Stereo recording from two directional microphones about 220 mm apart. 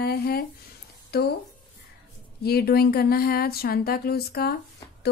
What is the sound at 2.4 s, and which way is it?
Speech, 45° left (ahead or behind).